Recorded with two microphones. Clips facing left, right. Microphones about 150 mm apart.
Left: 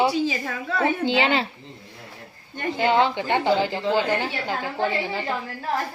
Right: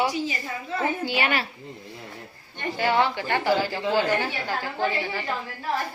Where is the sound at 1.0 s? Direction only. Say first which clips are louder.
Left 4 dB; 25° left (ahead or behind).